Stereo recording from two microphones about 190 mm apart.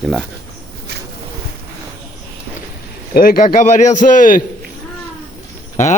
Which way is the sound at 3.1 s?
50° left (ahead or behind).